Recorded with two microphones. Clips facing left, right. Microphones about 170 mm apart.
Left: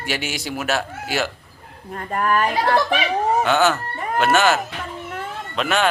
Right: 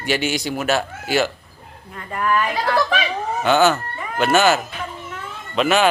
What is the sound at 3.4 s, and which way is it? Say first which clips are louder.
Speech: right 6 dB; centre (ahead or behind).